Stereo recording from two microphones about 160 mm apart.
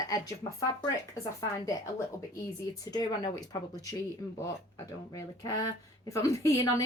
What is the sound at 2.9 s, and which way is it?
Speech, 25° left (ahead or behind).